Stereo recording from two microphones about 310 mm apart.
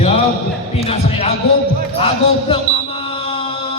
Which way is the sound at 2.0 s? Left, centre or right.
Centre.